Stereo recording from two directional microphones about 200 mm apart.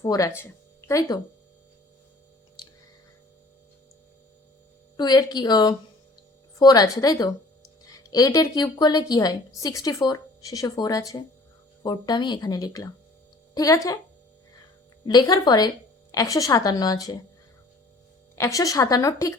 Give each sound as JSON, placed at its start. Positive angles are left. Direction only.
{"t": 0.0, "sound": "a woman's voice", "side_deg": 15}
{"t": 4.9, "sound": "a woman's voice", "side_deg": 20}
{"t": 15.0, "sound": "a woman's voice", "side_deg": 20}
{"t": 18.3, "sound": "a woman's voice", "side_deg": 15}